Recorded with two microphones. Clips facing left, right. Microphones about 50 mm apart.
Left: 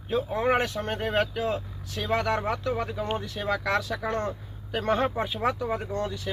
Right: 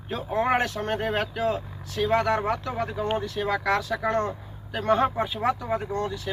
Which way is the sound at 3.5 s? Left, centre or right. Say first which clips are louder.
Right 1 dB; right.